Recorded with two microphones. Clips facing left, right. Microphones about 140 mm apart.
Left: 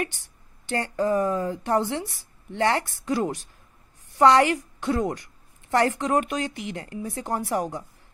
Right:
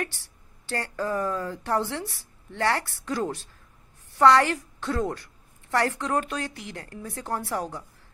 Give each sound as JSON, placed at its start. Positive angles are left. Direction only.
{"t": 0.0, "sound": "a woman's voice", "side_deg": 15}